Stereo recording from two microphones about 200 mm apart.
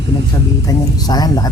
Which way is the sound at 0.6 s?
20° left (ahead or behind).